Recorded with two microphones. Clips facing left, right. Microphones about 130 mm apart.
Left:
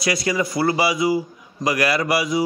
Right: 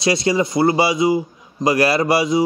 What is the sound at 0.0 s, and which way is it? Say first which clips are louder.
A man's voice: right 4 dB; 25° right (ahead or behind).